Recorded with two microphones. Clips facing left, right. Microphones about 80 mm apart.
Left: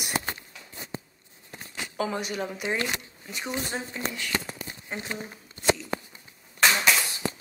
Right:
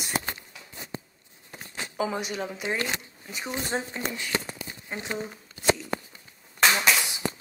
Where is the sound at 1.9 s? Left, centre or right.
Centre.